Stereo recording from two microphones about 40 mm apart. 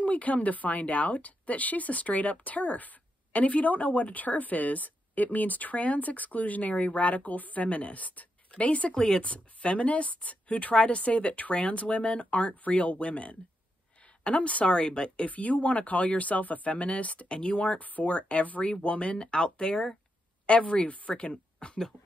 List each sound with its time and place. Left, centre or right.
0.0 s a woman's voice: left
8.9 s speech: centre
9.2 s a woman's voice: left
15.2 s a woman's voice: left
21.3 s a sound: left